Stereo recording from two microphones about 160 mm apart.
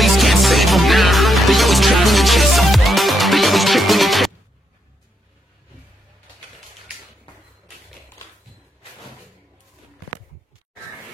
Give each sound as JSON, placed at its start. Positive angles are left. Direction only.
{"t": 0.0, "sound": "music", "side_deg": 0}